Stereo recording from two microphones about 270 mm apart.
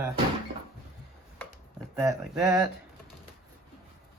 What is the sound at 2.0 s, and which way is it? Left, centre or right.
Speech, centre.